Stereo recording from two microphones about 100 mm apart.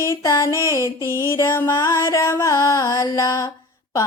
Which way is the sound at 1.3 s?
25° left (ahead or behind).